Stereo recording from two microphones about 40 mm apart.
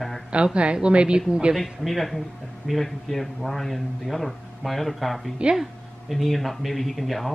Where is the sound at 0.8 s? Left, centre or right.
Right.